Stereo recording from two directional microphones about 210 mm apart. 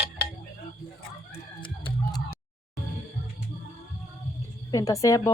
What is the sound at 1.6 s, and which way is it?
Music, 25° left (ahead or behind).